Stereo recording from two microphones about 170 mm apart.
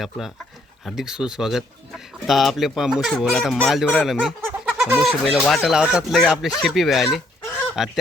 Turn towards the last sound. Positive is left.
turn(degrees=0)  # may be behind; listen again after turning